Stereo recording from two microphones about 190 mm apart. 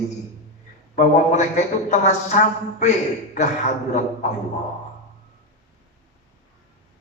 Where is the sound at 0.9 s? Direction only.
40° left (ahead or behind).